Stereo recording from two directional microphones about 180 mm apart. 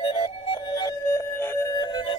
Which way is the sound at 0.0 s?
30° left (ahead or behind).